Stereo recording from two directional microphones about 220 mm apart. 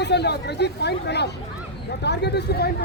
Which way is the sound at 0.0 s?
50° left (ahead or behind).